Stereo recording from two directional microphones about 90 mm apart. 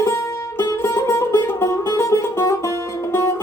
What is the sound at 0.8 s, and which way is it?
Music, 30° left (ahead or behind).